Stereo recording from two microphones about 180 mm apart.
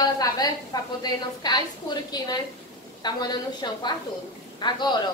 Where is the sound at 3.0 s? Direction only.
25° left (ahead or behind).